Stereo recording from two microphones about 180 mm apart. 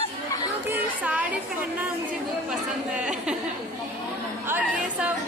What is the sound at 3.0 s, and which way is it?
Speech, 5° right (ahead or behind).